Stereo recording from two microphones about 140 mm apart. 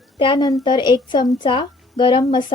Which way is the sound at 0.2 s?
30° left (ahead or behind).